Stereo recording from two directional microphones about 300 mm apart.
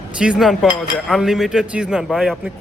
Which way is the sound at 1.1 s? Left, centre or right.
Centre.